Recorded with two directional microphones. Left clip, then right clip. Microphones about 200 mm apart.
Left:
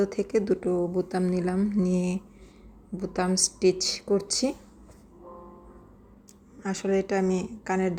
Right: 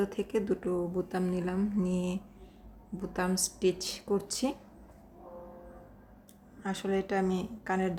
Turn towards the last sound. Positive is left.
turn(degrees=15)  # may be behind; listen again after turning